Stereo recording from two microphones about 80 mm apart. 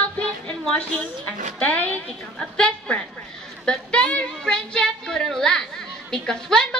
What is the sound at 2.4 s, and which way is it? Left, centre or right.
A woman's voice, centre.